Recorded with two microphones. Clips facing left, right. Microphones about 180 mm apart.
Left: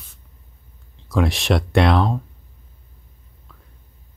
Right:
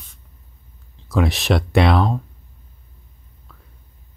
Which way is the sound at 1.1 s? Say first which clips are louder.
Right 1 dB; centre (ahead or behind).